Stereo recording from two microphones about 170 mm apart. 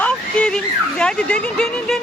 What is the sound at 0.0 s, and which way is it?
Speech, 5° left (ahead or behind).